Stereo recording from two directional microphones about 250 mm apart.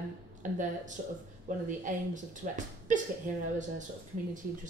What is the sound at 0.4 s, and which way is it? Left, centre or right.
A woman's voice, right.